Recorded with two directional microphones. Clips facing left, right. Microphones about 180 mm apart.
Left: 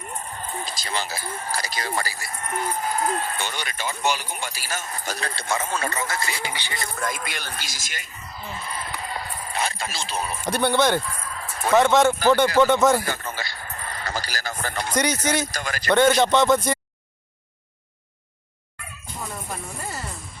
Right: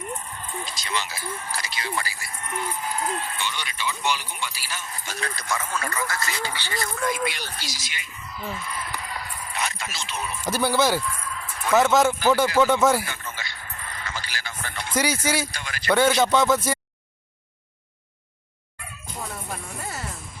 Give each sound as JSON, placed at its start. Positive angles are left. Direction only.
{"t": 0.3, "sound": "speech", "side_deg": 40}
{"t": 7.0, "sound": "speech", "side_deg": 45}
{"t": 10.5, "sound": "speech", "side_deg": -5}
{"t": 11.1, "sound": "a sound", "side_deg": 40}
{"t": 11.7, "sound": "speech", "side_deg": -5}
{"t": 13.1, "sound": "a sound", "side_deg": 35}
{"t": 14.9, "sound": "speech", "side_deg": -5}
{"t": 15.5, "sound": "speech", "side_deg": 45}
{"t": 15.9, "sound": "speech", "side_deg": -10}
{"t": 19.8, "sound": "music", "side_deg": 0}